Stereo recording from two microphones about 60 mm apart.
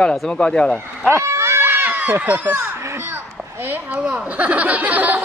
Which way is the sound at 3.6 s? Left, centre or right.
Right.